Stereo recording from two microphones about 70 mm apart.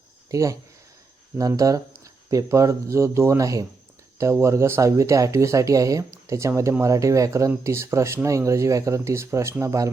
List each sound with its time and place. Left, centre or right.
0.3 s speech: right
4.2 s speech: right